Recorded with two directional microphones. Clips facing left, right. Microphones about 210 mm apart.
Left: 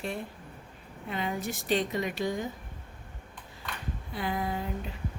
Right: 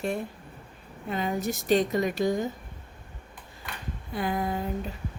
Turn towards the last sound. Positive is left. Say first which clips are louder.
# right 3 dB
turn(degrees=-45)  # may be behind; listen again after turning